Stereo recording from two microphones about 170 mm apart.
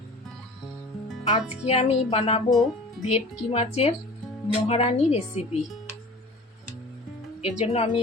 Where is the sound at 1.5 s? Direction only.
40° left (ahead or behind).